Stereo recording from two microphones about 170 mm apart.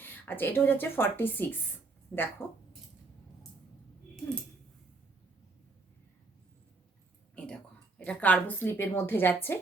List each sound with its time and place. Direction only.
0.0 s speech: 10° left (ahead or behind)
7.3 s a woman's voice: 5° left (ahead or behind)